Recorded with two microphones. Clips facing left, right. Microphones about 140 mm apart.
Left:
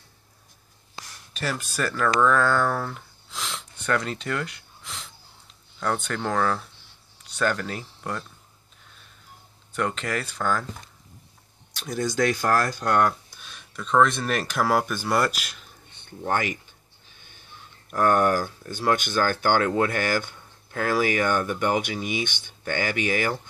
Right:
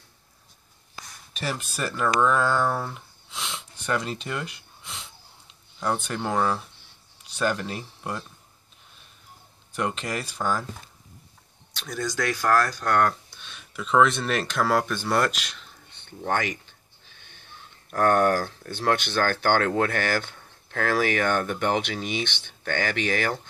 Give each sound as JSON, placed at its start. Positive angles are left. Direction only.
{"t": 1.4, "sound": "speech", "side_deg": -5}
{"t": 3.3, "sound": "sniff", "side_deg": 0}
{"t": 5.8, "sound": "speech", "side_deg": -15}
{"t": 9.8, "sound": "speech", "side_deg": -10}
{"t": 12.0, "sound": "speech", "side_deg": 15}
{"t": 12.9, "sound": "a sound", "side_deg": 10}
{"t": 13.7, "sound": "speech", "side_deg": -5}